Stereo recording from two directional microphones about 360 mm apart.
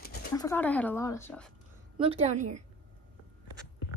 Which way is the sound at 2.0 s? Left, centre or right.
Centre.